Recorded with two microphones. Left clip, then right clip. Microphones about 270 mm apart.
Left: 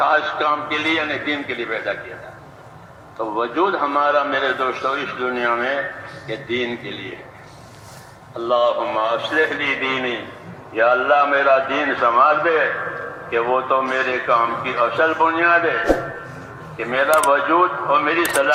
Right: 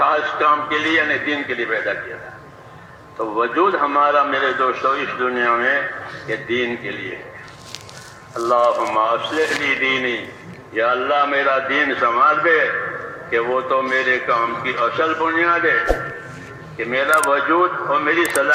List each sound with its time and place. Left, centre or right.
0.0 s a man's voice: left
3.2 s a man's voice: left
8.4 s speech: left
9.3 s a man's voice: centre